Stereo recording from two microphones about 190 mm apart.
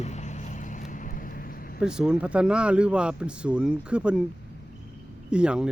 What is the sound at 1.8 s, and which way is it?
Speech, 5° right (ahead or behind).